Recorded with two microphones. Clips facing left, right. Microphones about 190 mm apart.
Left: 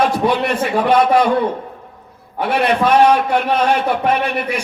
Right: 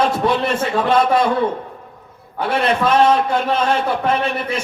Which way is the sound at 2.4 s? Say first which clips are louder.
Left 2 dB; 25° right (ahead or behind).